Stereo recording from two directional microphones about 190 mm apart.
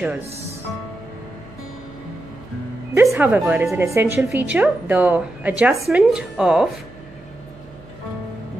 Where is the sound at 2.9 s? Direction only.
15° right (ahead or behind).